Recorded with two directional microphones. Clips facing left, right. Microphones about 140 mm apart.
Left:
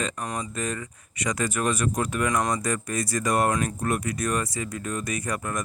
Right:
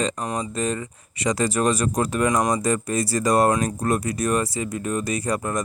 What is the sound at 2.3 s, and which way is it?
Speech, 25° right (ahead or behind).